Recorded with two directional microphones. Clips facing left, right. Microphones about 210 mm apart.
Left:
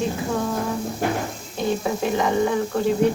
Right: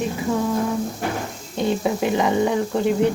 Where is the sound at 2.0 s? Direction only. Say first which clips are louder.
Even; 20° right (ahead or behind).